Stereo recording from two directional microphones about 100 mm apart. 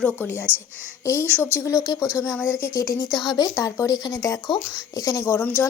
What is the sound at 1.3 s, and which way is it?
Speech, 20° right (ahead or behind).